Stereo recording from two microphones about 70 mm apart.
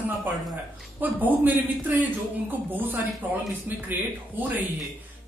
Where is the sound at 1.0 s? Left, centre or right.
Right.